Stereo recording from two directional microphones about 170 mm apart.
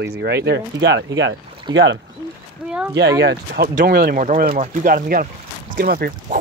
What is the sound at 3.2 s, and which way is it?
Speech, 75° right (ahead or behind).